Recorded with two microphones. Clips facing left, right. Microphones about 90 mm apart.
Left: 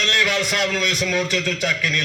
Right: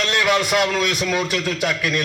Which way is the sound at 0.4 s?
10° right (ahead or behind).